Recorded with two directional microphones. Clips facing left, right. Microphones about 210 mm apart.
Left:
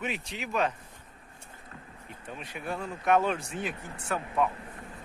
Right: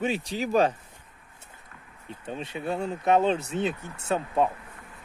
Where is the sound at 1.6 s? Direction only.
35° left (ahead or behind).